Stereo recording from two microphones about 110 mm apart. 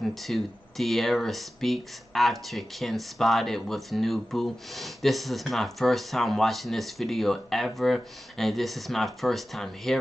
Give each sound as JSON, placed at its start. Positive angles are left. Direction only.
{"t": 0.0, "sound": "speech", "side_deg": 0}